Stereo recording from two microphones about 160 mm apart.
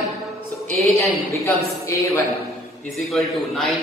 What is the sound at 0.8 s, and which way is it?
Speech, 15° left (ahead or behind).